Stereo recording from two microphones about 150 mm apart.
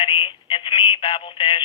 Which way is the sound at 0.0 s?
35° left (ahead or behind).